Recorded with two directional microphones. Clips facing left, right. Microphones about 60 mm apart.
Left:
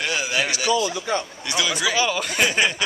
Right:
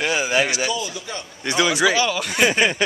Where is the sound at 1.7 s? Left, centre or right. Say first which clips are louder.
Right 2 dB; centre.